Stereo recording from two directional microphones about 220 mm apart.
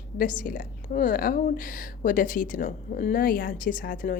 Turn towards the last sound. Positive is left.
turn(degrees=40)  # may be behind; listen again after turning